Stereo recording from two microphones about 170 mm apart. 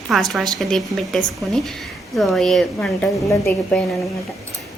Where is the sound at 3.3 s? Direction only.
15° left (ahead or behind).